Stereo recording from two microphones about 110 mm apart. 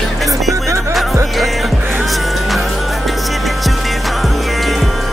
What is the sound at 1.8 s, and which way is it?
Music, 15° right (ahead or behind).